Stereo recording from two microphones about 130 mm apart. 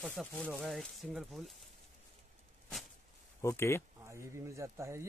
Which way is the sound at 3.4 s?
20° left (ahead or behind).